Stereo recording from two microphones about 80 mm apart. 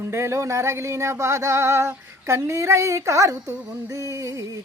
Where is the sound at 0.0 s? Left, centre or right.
Right.